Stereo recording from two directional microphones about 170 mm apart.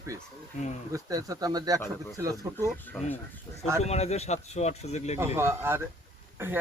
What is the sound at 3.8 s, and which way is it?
Speech, 40° left (ahead or behind).